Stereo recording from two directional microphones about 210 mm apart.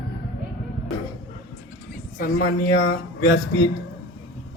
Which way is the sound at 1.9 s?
40° left (ahead or behind).